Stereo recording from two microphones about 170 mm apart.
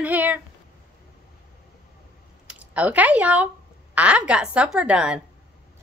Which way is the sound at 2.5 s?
10° right (ahead or behind).